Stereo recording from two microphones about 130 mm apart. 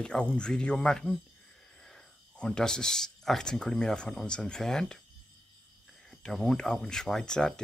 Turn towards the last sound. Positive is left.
turn(degrees=5)  # may be behind; listen again after turning